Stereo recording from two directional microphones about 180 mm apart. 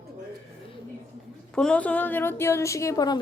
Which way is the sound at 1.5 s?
5° left (ahead or behind).